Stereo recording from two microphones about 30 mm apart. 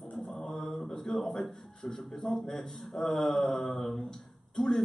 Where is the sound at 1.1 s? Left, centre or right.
Centre.